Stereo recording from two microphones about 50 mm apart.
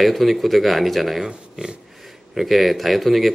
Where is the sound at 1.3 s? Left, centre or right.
Centre.